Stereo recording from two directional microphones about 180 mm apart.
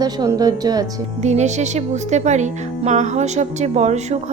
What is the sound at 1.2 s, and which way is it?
Speech, 40° right (ahead or behind).